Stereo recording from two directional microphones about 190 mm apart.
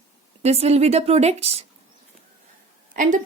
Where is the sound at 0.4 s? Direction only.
35° right (ahead or behind).